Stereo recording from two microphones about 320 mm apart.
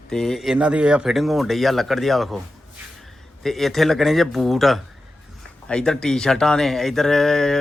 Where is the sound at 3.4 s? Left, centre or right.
Centre.